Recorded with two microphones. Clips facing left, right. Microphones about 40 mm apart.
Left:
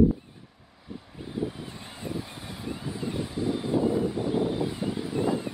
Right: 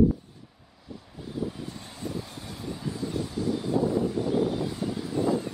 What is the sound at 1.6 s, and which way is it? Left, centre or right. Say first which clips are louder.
Vehicle: right 1 dB; left.